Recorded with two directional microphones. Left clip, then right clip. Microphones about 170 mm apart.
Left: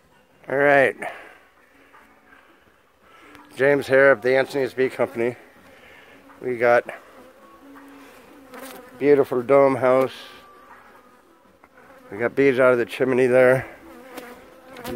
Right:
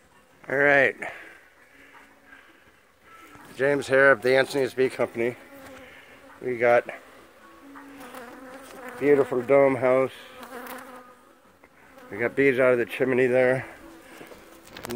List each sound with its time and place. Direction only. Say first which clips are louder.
0.5 s a sound: left 3 dB; 20° left (ahead or behind)
3.6 s speech: left 3 dB; 30° left (ahead or behind)
4.2 s bee: left 2 dB; 5° left (ahead or behind)
6.4 s speech: left 3 dB; 5° left (ahead or behind)
9.0 s bee: left 3 dB; 25° left (ahead or behind)
12.1 s speech: left 3 dB; 10° left (ahead or behind)
13.3 s speech: left 6 dB; 50° left (ahead or behind)